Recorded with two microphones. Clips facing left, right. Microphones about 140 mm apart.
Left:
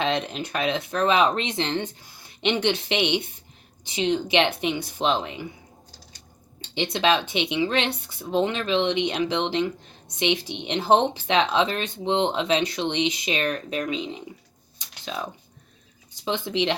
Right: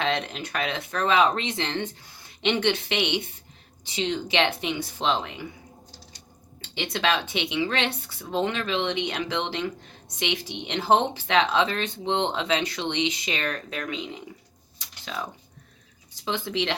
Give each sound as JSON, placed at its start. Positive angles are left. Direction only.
{"t": 0.0, "sound": "speech", "side_deg": 20}
{"t": 6.7, "sound": "speech", "side_deg": 20}
{"t": 14.8, "sound": "a sound", "side_deg": 20}
{"t": 16.2, "sound": "speech", "side_deg": 20}